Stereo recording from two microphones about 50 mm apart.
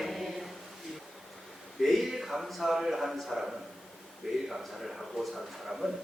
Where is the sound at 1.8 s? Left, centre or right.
Centre.